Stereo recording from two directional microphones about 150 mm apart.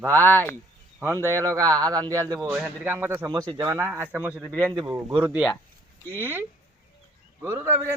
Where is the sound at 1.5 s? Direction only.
25° right (ahead or behind); by 4.4 s 10° right (ahead or behind).